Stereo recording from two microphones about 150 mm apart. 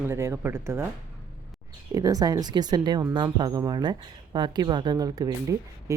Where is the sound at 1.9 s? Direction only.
25° right (ahead or behind).